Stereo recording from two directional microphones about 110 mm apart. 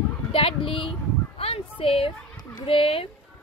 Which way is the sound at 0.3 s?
55° left (ahead or behind).